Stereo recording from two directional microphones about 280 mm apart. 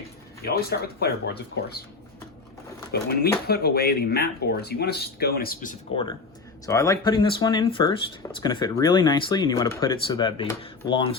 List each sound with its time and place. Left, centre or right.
0.4 s speech: left
2.9 s speech: left
6.7 s speech: centre